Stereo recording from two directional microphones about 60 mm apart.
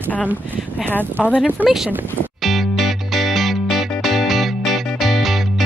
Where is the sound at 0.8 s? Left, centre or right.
Left.